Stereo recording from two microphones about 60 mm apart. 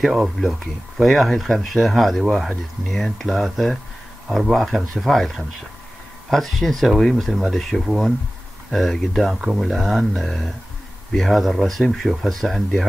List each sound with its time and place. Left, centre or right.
0.0 s speech: centre